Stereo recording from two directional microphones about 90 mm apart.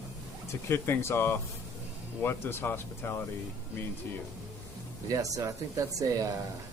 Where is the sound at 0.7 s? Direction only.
30° left (ahead or behind).